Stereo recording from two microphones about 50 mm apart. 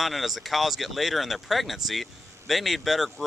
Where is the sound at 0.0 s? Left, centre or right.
Centre.